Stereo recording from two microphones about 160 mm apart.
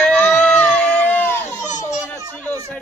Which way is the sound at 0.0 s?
5° left (ahead or behind).